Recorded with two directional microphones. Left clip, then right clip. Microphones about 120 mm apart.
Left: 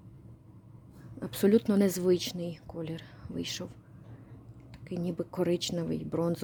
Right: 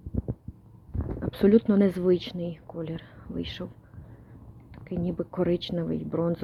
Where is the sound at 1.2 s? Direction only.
15° left (ahead or behind).